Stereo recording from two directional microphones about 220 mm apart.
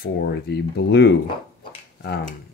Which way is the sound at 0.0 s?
50° left (ahead or behind).